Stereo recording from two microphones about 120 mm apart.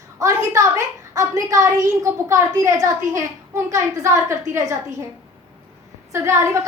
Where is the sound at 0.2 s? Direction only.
25° right (ahead or behind).